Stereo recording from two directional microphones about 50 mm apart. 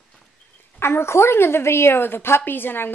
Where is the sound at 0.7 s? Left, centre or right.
Left.